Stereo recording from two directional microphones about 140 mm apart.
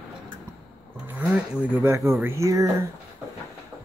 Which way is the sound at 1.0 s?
10° right (ahead or behind).